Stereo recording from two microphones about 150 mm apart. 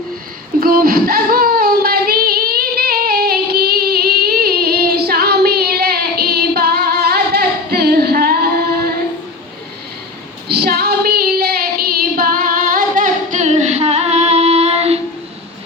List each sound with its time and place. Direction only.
0.6 s child singing: 75° right (ahead or behind)
10.5 s female singing: 90° right; by 15.0 s 45° right (ahead or behind)